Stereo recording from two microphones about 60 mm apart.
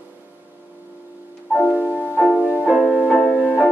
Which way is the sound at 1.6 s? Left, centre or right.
Left.